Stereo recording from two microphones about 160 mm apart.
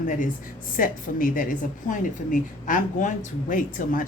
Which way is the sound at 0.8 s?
60° left (ahead or behind).